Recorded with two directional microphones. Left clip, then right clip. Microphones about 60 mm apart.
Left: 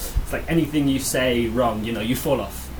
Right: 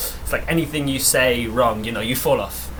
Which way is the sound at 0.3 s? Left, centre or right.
Right.